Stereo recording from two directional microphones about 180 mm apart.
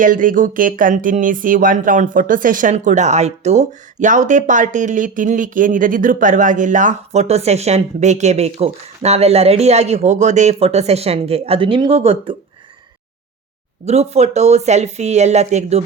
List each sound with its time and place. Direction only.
0.0 s speech: 50° right (ahead or behind); by 12.4 s 30° right (ahead or behind)
13.8 s speech: 35° right (ahead or behind)